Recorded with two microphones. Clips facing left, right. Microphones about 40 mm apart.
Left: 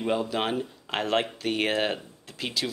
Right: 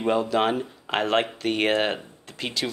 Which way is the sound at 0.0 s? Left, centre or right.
Centre.